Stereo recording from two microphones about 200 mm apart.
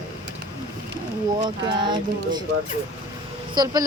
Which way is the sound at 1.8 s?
20° right (ahead or behind).